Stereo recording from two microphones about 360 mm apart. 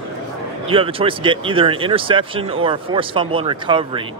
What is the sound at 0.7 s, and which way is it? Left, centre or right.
Speech, centre.